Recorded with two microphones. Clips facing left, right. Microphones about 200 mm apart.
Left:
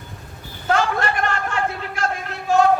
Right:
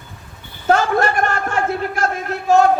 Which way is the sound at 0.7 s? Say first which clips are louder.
Right 5 dB; 45° right (ahead or behind).